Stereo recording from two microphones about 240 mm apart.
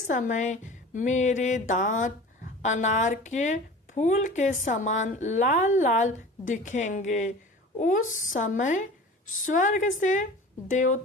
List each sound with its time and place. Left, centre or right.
0.1 s a woman's voice: left